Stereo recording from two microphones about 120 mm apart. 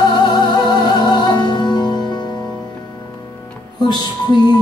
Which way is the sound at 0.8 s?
40° left (ahead or behind).